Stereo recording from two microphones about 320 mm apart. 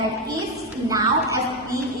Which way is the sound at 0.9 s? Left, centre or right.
Centre.